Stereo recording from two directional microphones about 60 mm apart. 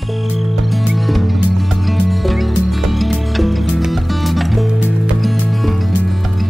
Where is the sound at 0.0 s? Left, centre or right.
Centre.